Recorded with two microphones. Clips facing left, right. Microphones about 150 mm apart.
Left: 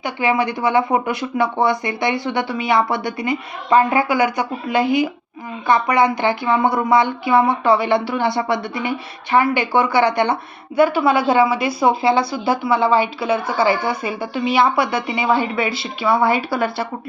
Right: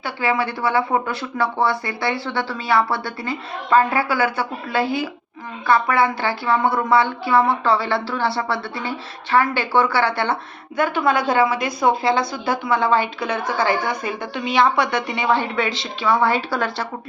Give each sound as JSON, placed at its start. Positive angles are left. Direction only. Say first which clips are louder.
{"t": 0.0, "sound": "a woman's voice", "louder": "left 3 dB", "side_deg": 15}